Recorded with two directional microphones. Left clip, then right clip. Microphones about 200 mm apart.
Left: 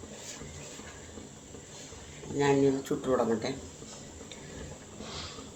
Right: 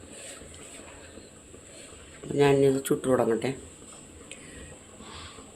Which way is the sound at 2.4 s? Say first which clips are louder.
Right 4 dB; 55° right (ahead or behind).